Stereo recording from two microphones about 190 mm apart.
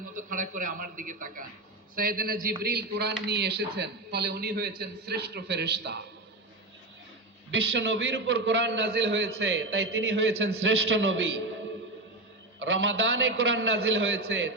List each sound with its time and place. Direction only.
0.3 s a man's voice: 45° right (ahead or behind); by 6.0 s 60° right (ahead or behind)
7.5 s a man's voice: 70° right (ahead or behind)
12.5 s a man's voice: 90° right